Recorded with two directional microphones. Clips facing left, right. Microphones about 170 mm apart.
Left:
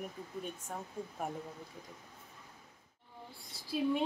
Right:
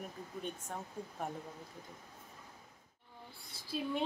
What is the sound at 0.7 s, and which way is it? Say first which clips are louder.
Speech: left 3 dB; 5° left (ahead or behind).